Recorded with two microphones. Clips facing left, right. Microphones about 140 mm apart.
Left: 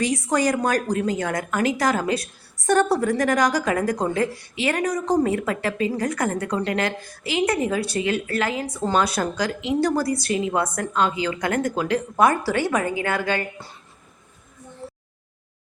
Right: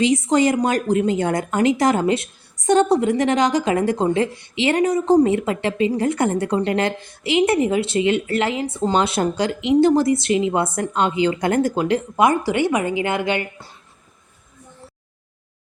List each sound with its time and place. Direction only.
0.0 s a woman's voice: 20° right (ahead or behind)